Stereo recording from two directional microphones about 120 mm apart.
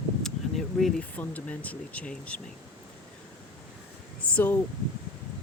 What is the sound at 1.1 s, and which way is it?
Speech, 15° left (ahead or behind).